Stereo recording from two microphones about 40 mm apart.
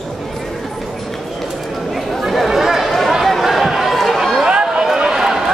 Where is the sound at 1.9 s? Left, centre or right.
Centre.